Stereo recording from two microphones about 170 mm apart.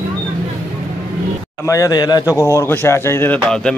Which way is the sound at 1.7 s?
20° left (ahead or behind).